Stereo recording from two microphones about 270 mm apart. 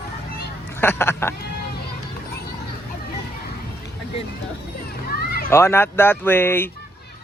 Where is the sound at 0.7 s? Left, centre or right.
Centre.